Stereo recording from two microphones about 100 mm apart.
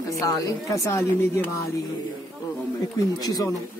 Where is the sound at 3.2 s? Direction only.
40° left (ahead or behind).